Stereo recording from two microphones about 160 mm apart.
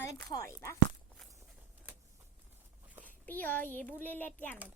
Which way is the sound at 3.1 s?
10° left (ahead or behind).